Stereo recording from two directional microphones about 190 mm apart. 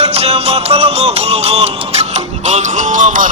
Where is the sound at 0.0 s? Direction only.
35° right (ahead or behind).